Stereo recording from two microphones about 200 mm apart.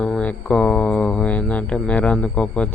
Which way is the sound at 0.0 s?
5° left (ahead or behind).